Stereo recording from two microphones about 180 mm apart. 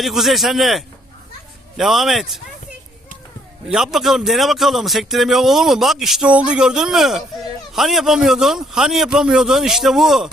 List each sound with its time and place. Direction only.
0.0 s a man's voice: centre (ahead or behind)
3.7 s a man's voice: centre (ahead or behind)